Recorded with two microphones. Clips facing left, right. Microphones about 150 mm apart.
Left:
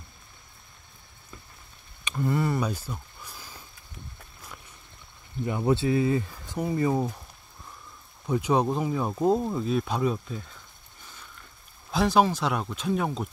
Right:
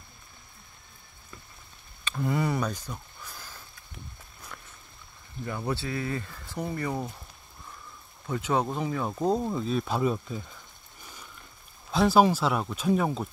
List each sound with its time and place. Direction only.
2.1 s a sound: centre (ahead or behind)
5.4 s speech: 20° left (ahead or behind)
8.3 s speech: 15° left (ahead or behind); by 10.4 s 5° right (ahead or behind)
11.9 s speech: centre (ahead or behind)